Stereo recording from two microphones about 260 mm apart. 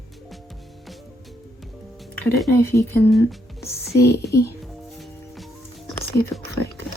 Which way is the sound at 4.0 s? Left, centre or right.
Left.